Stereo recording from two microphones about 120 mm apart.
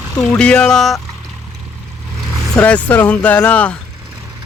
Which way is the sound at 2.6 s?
10° left (ahead or behind).